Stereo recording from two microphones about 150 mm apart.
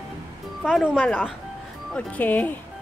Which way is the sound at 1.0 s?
10° left (ahead or behind).